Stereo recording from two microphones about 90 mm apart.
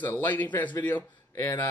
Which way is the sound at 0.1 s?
20° left (ahead or behind).